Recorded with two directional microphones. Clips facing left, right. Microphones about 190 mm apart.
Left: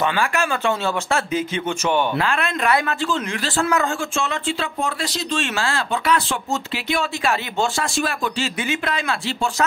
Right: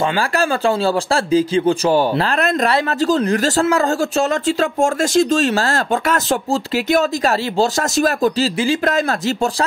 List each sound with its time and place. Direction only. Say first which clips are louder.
0.4 s speech: right 5 dB; 35° right (ahead or behind)